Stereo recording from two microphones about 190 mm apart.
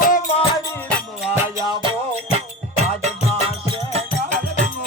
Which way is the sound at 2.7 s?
35° right (ahead or behind).